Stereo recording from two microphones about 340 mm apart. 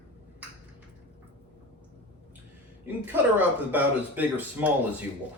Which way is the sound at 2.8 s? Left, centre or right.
Centre.